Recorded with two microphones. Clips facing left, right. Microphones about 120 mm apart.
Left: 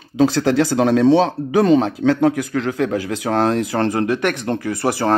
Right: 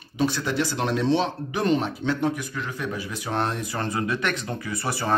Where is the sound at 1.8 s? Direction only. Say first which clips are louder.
Left 9 dB; 90° left.